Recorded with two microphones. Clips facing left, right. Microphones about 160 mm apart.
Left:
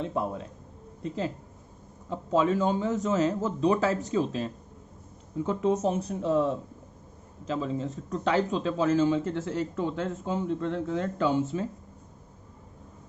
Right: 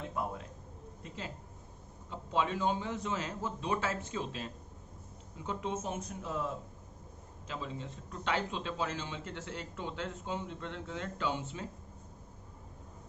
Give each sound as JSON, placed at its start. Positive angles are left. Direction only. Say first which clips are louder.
{"t": 1.0, "sound": "speech", "louder": "left 13 dB", "side_deg": 35}
{"t": 2.3, "sound": "speech", "louder": "left 8 dB", "side_deg": 45}
{"t": 5.5, "sound": "a man's voice", "louder": "left 11 dB", "side_deg": 40}